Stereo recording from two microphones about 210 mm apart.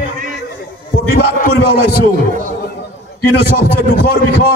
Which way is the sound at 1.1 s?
45° left (ahead or behind).